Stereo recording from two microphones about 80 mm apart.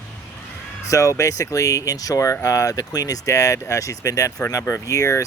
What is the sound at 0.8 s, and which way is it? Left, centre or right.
Speech, left.